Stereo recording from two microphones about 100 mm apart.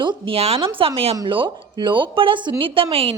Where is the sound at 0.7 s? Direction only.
70° right (ahead or behind).